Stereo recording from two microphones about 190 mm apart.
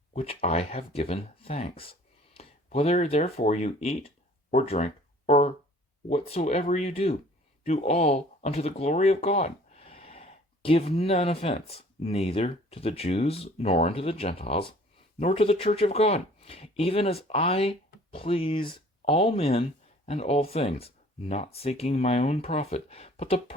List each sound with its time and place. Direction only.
0.1 s speech: 35° left (ahead or behind)